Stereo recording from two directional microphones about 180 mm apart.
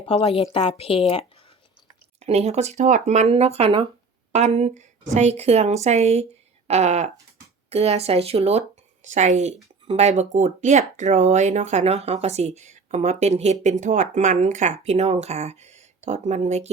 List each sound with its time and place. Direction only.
0.1 s a woman's voice: 35° left (ahead or behind)
2.2 s speech: 35° right (ahead or behind)